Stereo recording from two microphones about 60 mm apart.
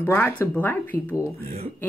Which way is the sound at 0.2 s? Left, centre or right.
Left.